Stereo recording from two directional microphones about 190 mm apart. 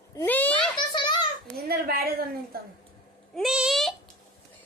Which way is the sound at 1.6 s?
55° right (ahead or behind).